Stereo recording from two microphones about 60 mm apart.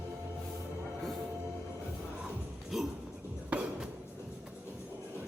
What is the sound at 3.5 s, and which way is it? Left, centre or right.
Music, right.